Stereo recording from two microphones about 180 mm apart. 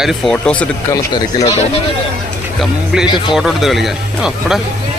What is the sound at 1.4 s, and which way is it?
Speech, 35° left (ahead or behind).